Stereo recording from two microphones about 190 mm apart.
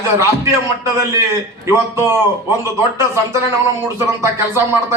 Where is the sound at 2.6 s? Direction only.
15° right (ahead or behind).